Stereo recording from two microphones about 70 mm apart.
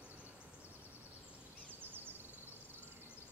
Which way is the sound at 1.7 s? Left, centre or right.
Right.